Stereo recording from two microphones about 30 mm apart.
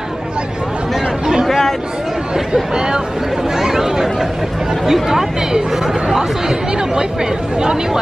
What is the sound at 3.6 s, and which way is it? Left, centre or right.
Speech, centre.